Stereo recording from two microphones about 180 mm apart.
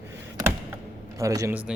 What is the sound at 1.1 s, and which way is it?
Speech, 20° right (ahead or behind).